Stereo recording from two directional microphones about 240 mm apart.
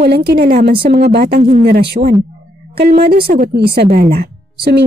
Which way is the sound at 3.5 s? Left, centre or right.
Right.